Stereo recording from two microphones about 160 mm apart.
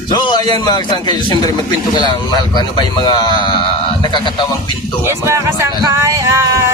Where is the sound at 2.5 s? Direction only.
25° left (ahead or behind).